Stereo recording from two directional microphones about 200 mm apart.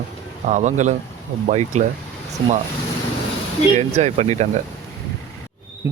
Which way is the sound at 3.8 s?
35° right (ahead or behind).